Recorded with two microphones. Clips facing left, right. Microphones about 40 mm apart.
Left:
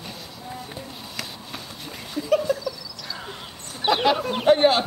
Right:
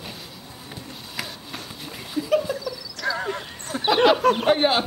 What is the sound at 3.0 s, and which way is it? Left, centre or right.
Horse, right.